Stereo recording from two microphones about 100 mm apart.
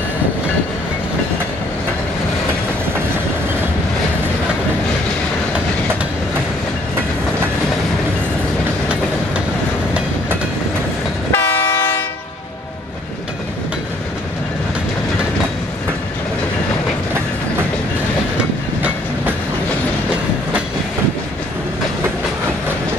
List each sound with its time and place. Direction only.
11.3 s train: 20° left (ahead or behind)